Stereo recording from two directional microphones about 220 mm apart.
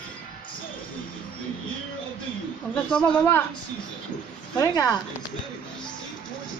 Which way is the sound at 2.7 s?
5° left (ahead or behind).